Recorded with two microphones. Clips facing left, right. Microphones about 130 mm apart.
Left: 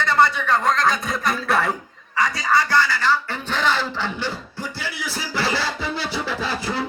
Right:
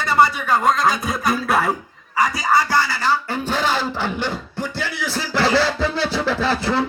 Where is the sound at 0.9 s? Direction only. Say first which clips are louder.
Right 2 dB; 5° right (ahead or behind).